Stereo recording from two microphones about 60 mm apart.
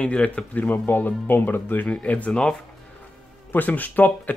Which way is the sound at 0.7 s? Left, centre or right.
Left.